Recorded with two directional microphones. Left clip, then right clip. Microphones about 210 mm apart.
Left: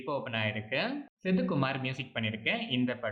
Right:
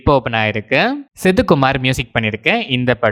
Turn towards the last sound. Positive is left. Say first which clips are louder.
# right 17 dB
turn(degrees=-55)  # may be behind; listen again after turning